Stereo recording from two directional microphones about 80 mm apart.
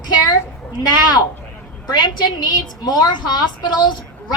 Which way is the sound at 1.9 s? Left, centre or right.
Left.